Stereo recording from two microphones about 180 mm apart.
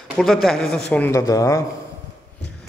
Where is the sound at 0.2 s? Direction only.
Centre (ahead or behind); by 1.6 s 20° left (ahead or behind).